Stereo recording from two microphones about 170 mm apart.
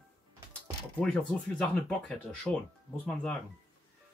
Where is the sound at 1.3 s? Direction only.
5° left (ahead or behind).